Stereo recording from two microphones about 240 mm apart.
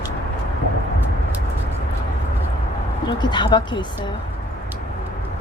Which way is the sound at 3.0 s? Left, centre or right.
Centre.